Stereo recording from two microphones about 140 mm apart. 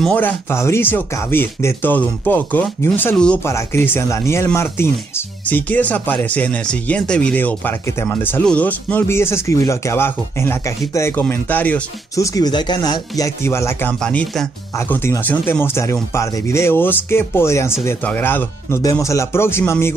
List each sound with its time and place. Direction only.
0.0 s speech: 10° left (ahead or behind)
12.2 s speech: 25° left (ahead or behind)
13.9 s speech: 5° left (ahead or behind)
14.8 s speech: 15° left (ahead or behind)